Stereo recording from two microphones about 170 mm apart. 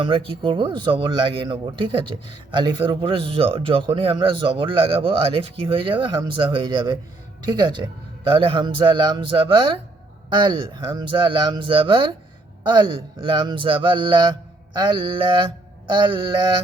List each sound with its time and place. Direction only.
0.0 s speech: 30° right (ahead or behind)